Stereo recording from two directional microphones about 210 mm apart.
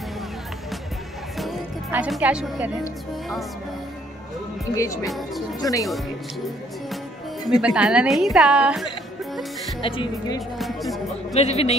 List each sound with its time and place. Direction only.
1.4 s music: 5° right (ahead or behind)
4.7 s speech: 15° left (ahead or behind)
5.0 s a woman's voice: centre (ahead or behind)
5.6 s speech: 15° left (ahead or behind)
7.4 s a woman's voice: 5° right (ahead or behind)
9.8 s speech: 25° left (ahead or behind)
10.6 s music: centre (ahead or behind)
11.3 s speech: 30° left (ahead or behind)